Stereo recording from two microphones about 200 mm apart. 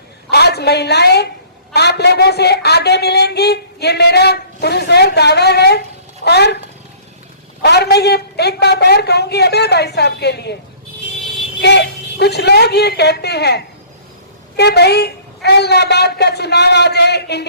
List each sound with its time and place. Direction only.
0.3 s a woman's voice: 55° left (ahead or behind)
7.6 s a woman's voice: 55° left (ahead or behind)
11.6 s a woman's voice: 55° left (ahead or behind)